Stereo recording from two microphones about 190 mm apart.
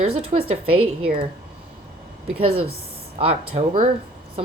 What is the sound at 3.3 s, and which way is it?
Speech, 30° right (ahead or behind).